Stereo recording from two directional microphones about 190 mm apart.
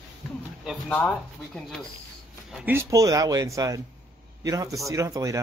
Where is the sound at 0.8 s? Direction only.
5° left (ahead or behind).